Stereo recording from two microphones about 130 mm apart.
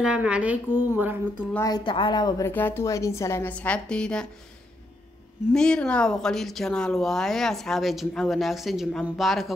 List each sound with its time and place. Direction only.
0.0 s a woman's voice: 10° right (ahead or behind)
1.9 s speech: 40° left (ahead or behind)
2.4 s a woman's voice: 15° left (ahead or behind)
5.5 s speech: 5° left (ahead or behind)